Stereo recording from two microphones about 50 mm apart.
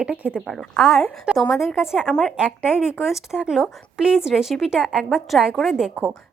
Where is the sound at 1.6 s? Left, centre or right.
Centre.